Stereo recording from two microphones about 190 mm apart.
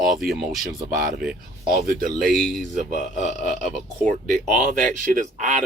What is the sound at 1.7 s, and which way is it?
Speech, 50° right (ahead or behind).